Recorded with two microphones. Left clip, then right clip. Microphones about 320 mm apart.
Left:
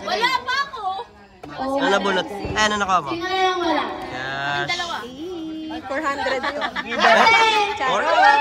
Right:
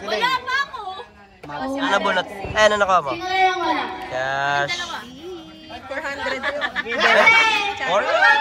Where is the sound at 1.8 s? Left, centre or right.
Centre.